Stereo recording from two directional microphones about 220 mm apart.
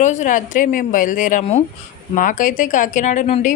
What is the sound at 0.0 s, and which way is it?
Speech, 35° left (ahead or behind).